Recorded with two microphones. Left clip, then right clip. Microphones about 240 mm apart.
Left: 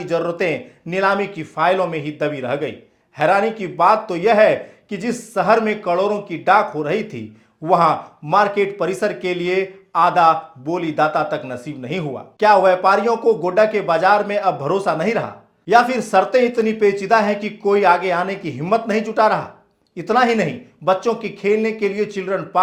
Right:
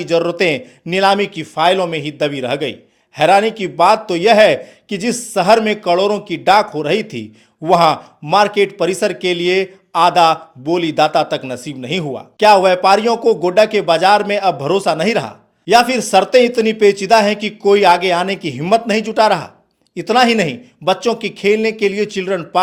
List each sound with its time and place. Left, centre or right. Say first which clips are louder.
0.0 s speech: right 5 dB; right